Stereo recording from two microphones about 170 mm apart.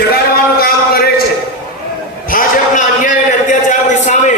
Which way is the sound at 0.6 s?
65° left (ahead or behind).